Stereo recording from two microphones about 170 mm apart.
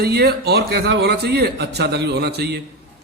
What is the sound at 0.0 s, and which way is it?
A man's voice, 70° right (ahead or behind).